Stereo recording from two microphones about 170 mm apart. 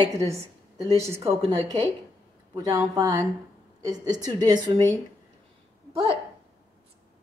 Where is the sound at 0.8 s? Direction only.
15° right (ahead or behind).